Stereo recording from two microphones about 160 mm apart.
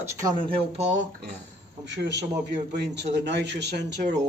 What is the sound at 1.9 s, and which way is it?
Speech, 90° right.